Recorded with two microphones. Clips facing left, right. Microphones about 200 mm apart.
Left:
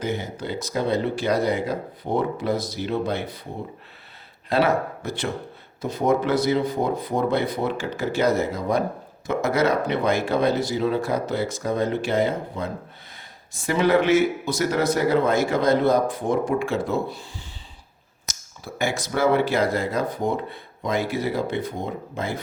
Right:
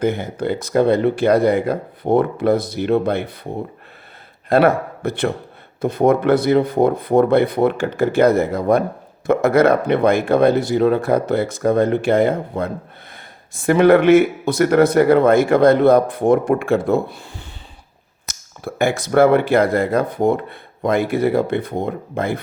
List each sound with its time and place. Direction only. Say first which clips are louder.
0.0 s speech: right 8 dB; 55° right (ahead or behind)
4.4 s speech: right 6 dB; 55° right (ahead or behind)